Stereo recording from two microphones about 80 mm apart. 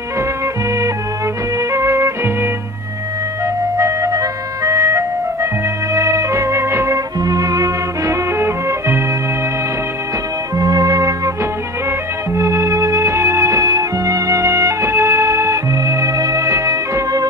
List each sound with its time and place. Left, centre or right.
1.7 s music: right
3.7 s music: right
7.2 s music: right
10.6 s music: right
12.4 s music: right